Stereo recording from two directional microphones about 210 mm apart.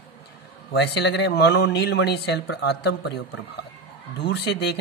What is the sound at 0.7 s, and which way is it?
Speech, 55° left (ahead or behind).